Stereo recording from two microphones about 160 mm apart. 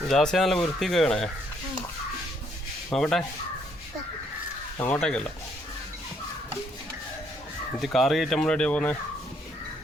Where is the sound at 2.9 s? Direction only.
Centre (ahead or behind).